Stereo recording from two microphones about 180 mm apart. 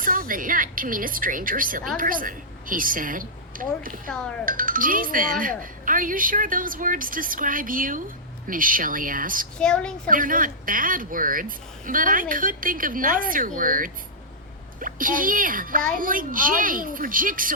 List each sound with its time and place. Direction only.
0.0 s speech: 50° right (ahead or behind)
4.1 s a woman's voice: 5° left (ahead or behind)
4.4 s speech: 50° right (ahead or behind)
9.6 s a woman's voice: 5° left (ahead or behind)
10.1 s speech: 50° right (ahead or behind)